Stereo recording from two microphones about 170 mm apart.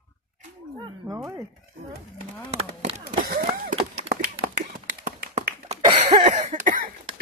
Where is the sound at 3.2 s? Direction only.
55° right (ahead or behind).